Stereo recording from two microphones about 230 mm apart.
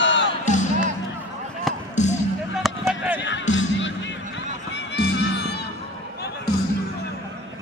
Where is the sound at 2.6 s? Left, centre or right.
Centre.